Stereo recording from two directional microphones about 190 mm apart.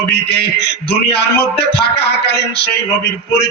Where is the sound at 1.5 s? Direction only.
60° left (ahead or behind).